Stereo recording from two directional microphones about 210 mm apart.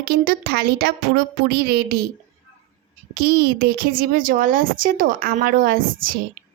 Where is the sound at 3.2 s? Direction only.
45° right (ahead or behind).